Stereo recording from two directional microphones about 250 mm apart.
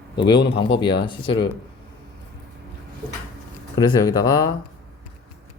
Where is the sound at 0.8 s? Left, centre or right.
Centre.